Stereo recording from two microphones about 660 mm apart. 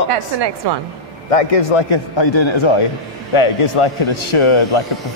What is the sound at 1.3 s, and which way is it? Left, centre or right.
A man's voice, left.